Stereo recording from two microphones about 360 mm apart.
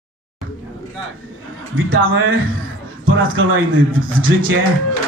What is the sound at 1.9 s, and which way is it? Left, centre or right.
Speech, right.